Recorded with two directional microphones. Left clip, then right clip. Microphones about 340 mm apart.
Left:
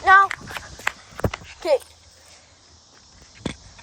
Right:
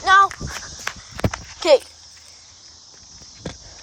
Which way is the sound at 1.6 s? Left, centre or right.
Right.